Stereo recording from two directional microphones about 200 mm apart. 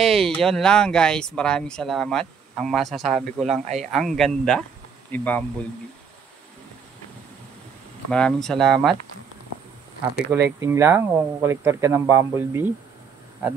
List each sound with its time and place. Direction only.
0.0 s speech: centre (ahead or behind)
3.6 s speech: 35° right (ahead or behind)
3.9 s speech: centre (ahead or behind)
8.1 s speech: 5° left (ahead or behind)
10.6 s speech: 15° right (ahead or behind)